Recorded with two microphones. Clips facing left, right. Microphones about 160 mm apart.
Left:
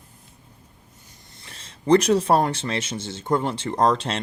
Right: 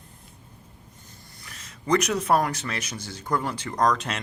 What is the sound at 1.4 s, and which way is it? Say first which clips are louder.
Speech: left 2 dB; 30° left (ahead or behind).